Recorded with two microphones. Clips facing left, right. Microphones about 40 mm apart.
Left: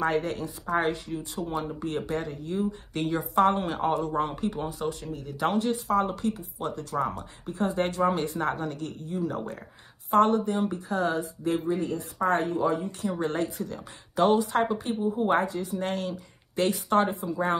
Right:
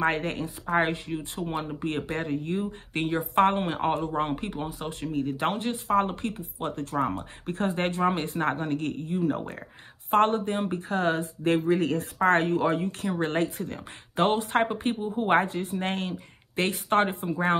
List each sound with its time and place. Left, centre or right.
0.0 s speech: right
4.8 s speech: right
7.4 s speech: right